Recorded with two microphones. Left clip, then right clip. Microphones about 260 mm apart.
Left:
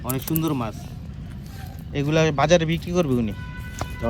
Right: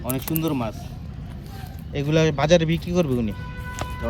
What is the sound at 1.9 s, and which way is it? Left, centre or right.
Speech, centre.